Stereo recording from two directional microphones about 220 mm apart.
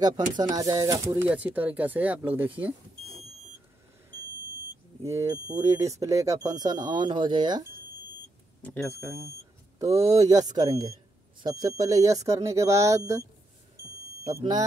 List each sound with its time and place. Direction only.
0.0 s speech: 20° right (ahead or behind)
5.0 s speech: 10° right (ahead or behind)
8.6 s speech: 5° left (ahead or behind)
9.8 s speech: 15° right (ahead or behind)
14.3 s speech: 20° right (ahead or behind)